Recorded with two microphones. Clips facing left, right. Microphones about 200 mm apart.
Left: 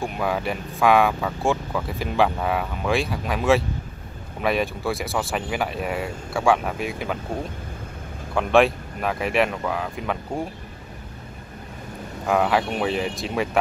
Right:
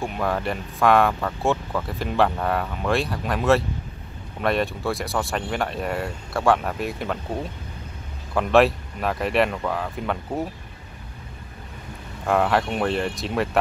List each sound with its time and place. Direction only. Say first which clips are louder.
0.0 s speech: even; centre (ahead or behind)
8.4 s speech: even; centre (ahead or behind)
12.3 s speech: even; centre (ahead or behind)